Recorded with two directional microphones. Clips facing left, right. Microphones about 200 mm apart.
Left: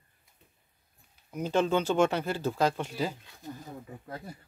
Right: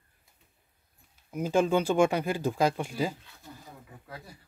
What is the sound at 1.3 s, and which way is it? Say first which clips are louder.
Speech: right 2 dB; 10° right (ahead or behind).